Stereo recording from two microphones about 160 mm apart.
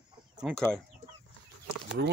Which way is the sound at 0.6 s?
5° left (ahead or behind).